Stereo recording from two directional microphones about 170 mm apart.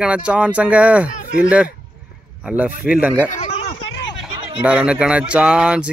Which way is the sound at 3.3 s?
45° left (ahead or behind).